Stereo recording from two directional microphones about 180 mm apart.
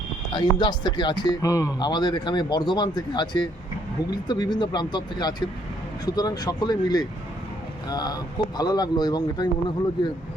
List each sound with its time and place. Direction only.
0.3 s speech: 25° left (ahead or behind)